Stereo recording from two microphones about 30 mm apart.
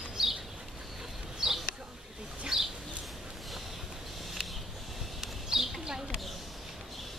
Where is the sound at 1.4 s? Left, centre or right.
Centre.